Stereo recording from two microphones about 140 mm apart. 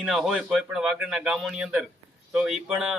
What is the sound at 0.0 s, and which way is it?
A man's voice, 5° right (ahead or behind).